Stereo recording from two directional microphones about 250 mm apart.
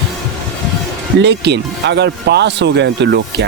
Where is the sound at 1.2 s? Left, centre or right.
Right.